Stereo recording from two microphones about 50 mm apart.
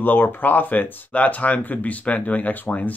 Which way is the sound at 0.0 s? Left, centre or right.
Left.